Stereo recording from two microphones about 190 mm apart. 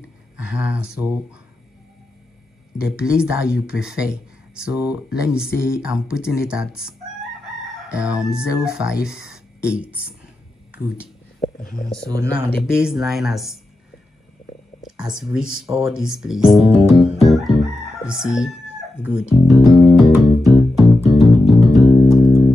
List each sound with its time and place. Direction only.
0.4 s speech: 5° right (ahead or behind)
2.8 s speech: 5° right (ahead or behind)
11.4 s a sound: 35° left (ahead or behind)
12.1 s speech: 15° right (ahead or behind)
12.6 s speech: 5° right (ahead or behind)
14.8 s speech: 5° right (ahead or behind)
17.0 s crowing: centre (ahead or behind)
19.0 s music: 5° right (ahead or behind)